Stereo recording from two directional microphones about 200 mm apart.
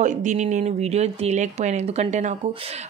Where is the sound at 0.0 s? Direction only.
35° right (ahead or behind).